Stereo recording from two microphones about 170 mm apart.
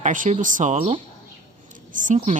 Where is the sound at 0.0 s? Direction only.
45° right (ahead or behind).